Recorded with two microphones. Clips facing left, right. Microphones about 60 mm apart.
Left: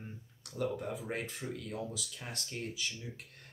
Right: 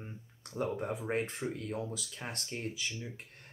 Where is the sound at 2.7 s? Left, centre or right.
Centre.